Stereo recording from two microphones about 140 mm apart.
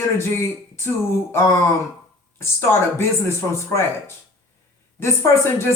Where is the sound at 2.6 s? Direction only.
15° left (ahead or behind).